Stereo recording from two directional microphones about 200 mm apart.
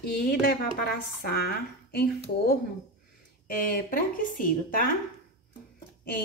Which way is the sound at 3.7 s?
45° left (ahead or behind).